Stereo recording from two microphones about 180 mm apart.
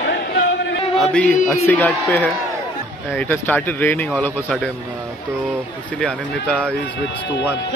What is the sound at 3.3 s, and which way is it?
Speech, 10° left (ahead or behind).